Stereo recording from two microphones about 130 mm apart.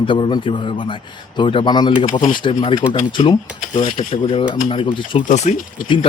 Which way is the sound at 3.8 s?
75° left (ahead or behind).